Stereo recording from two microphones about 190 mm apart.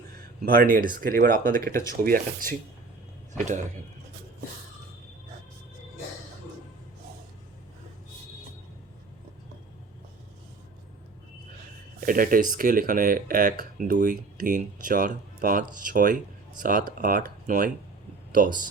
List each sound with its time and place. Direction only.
0.4 s speech: 45° right (ahead or behind)
11.9 s speech: 45° right (ahead or behind)